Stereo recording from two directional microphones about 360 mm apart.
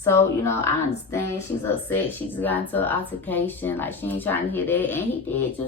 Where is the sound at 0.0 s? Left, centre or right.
Centre.